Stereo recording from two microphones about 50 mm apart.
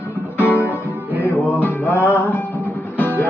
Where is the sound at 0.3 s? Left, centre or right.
Left.